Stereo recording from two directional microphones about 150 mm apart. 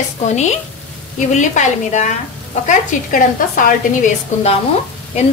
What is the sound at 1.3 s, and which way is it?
Speech, 55° left (ahead or behind).